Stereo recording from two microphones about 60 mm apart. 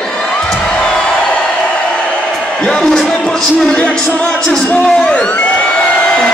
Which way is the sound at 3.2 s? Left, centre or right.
Left.